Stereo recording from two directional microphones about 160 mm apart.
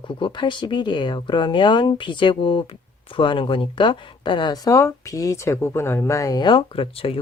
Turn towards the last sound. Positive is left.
turn(degrees=35)  # may be behind; listen again after turning